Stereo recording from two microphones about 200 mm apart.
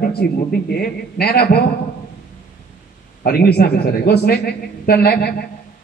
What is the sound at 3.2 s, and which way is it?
A man's voice, 50° left (ahead or behind).